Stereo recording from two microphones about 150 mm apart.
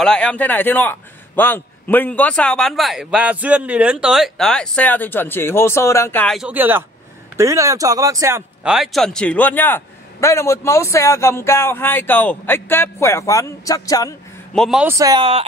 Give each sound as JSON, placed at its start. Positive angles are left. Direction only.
{"t": 0.0, "sound": "a man's voice", "side_deg": 5}
{"t": 6.2, "sound": "speech", "side_deg": 0}
{"t": 6.5, "sound": "speech", "side_deg": -15}
{"t": 8.6, "sound": "a man's voice", "side_deg": 0}
{"t": 14.5, "sound": "a man's voice", "side_deg": 5}
{"t": 15.0, "sound": "speech", "side_deg": -25}